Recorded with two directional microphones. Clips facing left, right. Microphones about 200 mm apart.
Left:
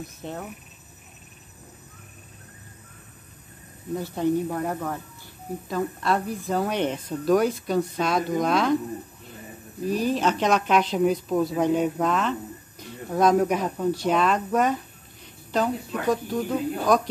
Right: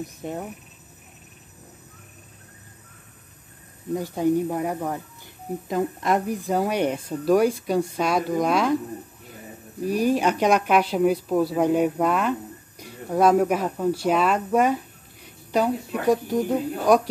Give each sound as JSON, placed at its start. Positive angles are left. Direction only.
{"t": 0.0, "sound": "a woman's voice", "side_deg": -15}
{"t": 3.9, "sound": "a woman's voice", "side_deg": -15}
{"t": 9.8, "sound": "a woman's voice", "side_deg": -10}